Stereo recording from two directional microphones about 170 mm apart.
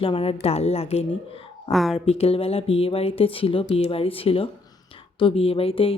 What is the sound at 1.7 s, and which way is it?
Speech, centre (ahead or behind).